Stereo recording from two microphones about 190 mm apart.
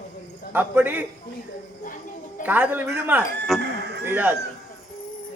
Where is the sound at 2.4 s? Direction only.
10° right (ahead or behind).